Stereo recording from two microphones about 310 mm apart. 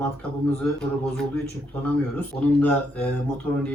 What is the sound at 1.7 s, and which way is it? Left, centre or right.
Speech, centre.